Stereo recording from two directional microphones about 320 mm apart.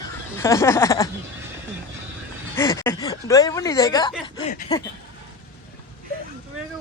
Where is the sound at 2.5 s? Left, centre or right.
Centre.